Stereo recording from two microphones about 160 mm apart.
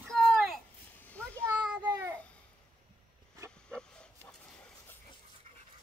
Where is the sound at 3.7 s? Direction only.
5° left (ahead or behind).